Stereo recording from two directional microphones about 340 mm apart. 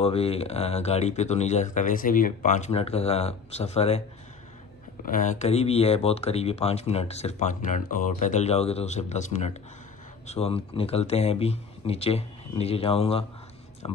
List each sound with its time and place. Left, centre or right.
0.0 s speech: centre
5.0 s speech: left